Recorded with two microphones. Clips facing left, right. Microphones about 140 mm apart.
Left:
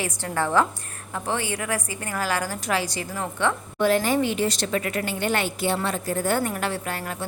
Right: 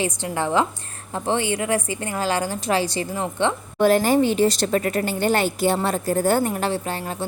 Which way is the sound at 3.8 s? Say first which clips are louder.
Right 4 dB; 40° right (ahead or behind).